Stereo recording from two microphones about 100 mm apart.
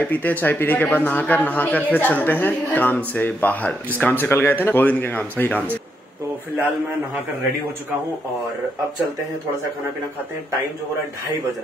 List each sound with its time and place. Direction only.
0.0 s a man's voice: 15° left (ahead or behind)